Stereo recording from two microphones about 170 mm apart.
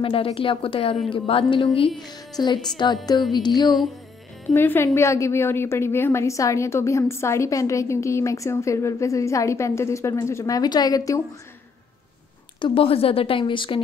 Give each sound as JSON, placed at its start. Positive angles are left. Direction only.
{"t": 0.0, "sound": "a woman's voice", "side_deg": 30}
{"t": 3.3, "sound": "music", "side_deg": 25}
{"t": 4.6, "sound": "a woman's voice", "side_deg": 15}
{"t": 12.5, "sound": "a woman's voice", "side_deg": 30}